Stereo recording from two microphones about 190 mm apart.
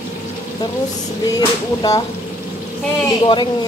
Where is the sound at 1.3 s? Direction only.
20° left (ahead or behind).